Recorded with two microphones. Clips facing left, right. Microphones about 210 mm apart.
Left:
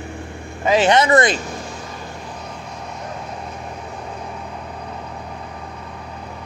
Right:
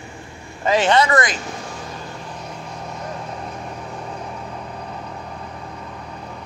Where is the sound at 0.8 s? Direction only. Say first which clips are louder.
Left 3 dB; 20° left (ahead or behind).